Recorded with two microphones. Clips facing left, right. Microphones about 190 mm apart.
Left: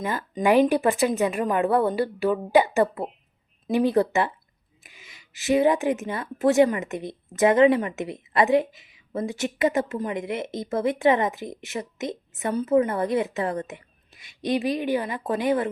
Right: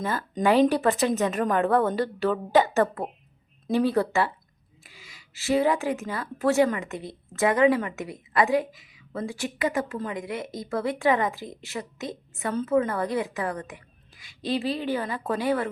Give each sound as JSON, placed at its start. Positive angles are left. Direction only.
{"t": 0.4, "sound": "speech", "side_deg": 0}
{"t": 0.7, "sound": "a woman's voice", "side_deg": 15}